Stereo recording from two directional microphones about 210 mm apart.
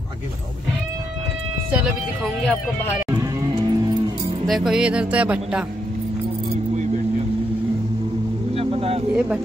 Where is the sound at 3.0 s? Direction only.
15° right (ahead or behind).